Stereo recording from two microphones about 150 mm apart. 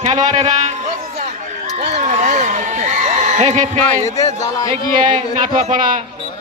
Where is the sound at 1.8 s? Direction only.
45° right (ahead or behind).